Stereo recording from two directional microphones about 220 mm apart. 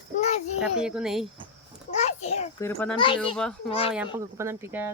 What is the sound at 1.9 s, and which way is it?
A child's voice, 30° left (ahead or behind).